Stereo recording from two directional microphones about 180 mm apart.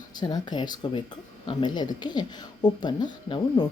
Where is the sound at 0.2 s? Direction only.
25° left (ahead or behind).